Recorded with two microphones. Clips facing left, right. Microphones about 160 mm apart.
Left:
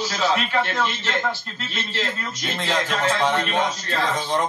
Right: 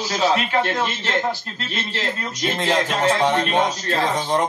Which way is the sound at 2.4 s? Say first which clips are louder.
Right 7 dB; 40° right (ahead or behind).